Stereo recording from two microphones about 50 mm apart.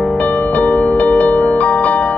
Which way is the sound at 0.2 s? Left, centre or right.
Left.